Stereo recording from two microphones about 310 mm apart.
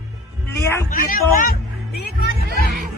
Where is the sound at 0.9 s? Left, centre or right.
Left.